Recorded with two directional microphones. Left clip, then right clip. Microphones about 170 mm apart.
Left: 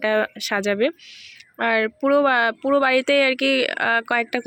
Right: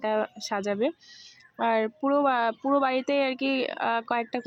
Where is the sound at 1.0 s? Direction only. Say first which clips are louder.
Left 8 dB; 10° right (ahead or behind).